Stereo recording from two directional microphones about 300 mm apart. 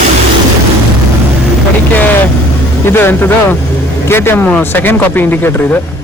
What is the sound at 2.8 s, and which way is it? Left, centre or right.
Speech, centre.